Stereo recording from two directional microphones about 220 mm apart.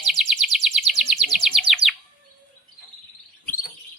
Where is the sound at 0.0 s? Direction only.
Centre (ahead or behind).